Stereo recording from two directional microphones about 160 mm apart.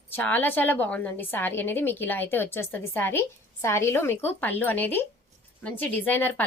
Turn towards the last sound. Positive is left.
turn(degrees=10)  # may be behind; listen again after turning